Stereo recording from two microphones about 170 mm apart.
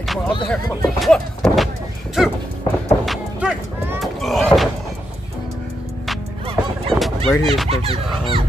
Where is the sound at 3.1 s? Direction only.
5° right (ahead or behind).